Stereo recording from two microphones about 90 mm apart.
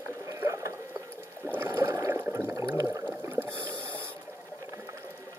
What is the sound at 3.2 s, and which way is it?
Rowboat, 30° right (ahead or behind).